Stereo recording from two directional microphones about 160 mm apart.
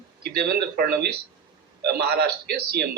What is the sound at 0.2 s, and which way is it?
A man's voice, 85° right.